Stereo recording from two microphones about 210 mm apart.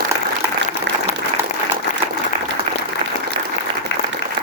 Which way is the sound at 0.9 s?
60° right (ahead or behind).